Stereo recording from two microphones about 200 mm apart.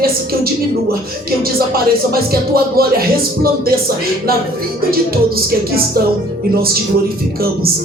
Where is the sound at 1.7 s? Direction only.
50° right (ahead or behind).